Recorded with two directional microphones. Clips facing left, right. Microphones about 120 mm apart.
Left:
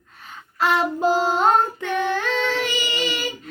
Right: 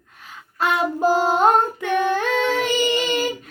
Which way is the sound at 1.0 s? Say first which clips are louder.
Right 5 dB; 45° right (ahead or behind).